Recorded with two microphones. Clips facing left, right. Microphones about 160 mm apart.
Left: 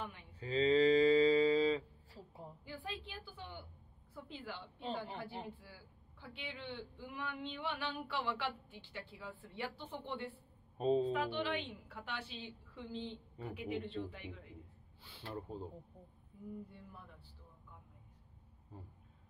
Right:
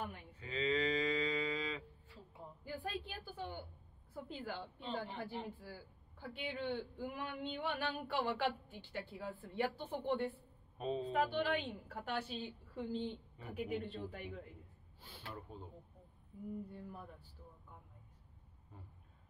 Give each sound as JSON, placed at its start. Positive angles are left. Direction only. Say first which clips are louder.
{"t": 0.0, "sound": "a sound", "louder": "right 1 dB", "side_deg": -45}
{"t": 0.4, "sound": "livestock", "louder": "left 7 dB", "side_deg": 35}
{"t": 2.6, "sound": "a woman's voice", "louder": "right 4 dB", "side_deg": -45}
{"t": 5.1, "sound": "a woman's voice", "louder": "right 1 dB", "side_deg": 40}
{"t": 5.6, "sound": "a man's voice", "louder": "right 6 dB", "side_deg": -45}
{"t": 10.8, "sound": "a woman's voice", "louder": "left 7 dB", "side_deg": 35}
{"t": 11.1, "sound": "a man's voice", "louder": "right 1 dB", "side_deg": -45}
{"t": 15.5, "sound": "a woman's voice", "louder": "left 6 dB", "side_deg": 35}
{"t": 16.7, "sound": "a man's voice", "louder": "right 6 dB", "side_deg": -45}
{"t": 18.7, "sound": "speech", "louder": "left 5 dB", "side_deg": 35}